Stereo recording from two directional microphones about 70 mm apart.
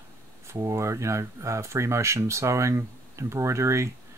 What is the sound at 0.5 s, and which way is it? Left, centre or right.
Speech, right.